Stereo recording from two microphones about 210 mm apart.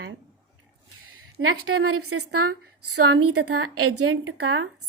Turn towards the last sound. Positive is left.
turn(degrees=-80)